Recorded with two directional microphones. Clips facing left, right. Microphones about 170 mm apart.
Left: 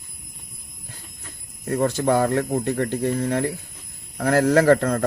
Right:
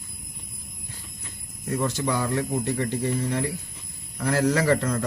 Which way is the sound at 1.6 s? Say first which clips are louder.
Left 5 dB; 55° left (ahead or behind).